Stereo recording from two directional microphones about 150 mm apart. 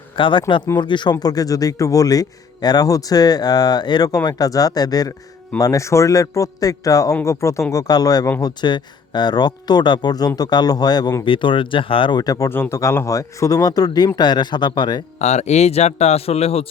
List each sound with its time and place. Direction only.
0.2 s speech: 35° left (ahead or behind)
15.2 s speech: 50° left (ahead or behind)